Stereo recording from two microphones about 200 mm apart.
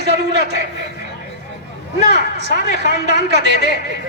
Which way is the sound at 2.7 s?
55° right (ahead or behind).